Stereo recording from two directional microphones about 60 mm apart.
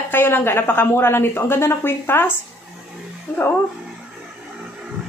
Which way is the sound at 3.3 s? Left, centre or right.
Centre.